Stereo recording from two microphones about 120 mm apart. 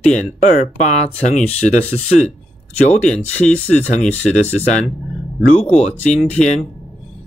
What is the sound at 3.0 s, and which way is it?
Speech, 10° left (ahead or behind).